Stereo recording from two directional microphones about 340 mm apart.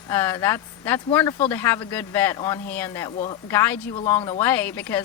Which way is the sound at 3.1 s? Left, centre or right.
Centre.